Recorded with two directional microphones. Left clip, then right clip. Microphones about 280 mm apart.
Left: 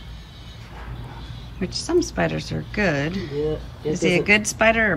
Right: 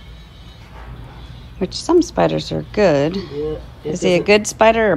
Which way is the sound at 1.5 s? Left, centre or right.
Centre.